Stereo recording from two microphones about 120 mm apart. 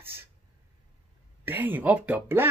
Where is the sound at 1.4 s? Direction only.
15° right (ahead or behind).